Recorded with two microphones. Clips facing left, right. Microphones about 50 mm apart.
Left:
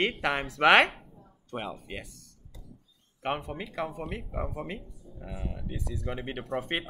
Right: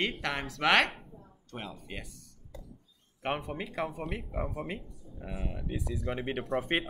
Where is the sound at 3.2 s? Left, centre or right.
Centre.